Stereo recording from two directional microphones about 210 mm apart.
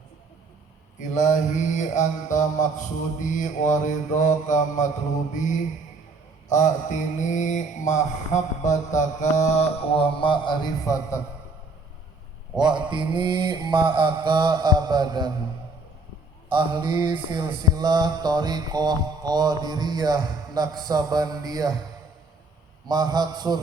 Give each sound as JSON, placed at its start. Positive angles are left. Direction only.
{"t": 0.9, "sound": "mantra", "side_deg": 35}
{"t": 12.5, "sound": "mantra", "side_deg": -20}
{"t": 16.5, "sound": "mantra", "side_deg": -25}
{"t": 22.9, "sound": "mantra", "side_deg": -20}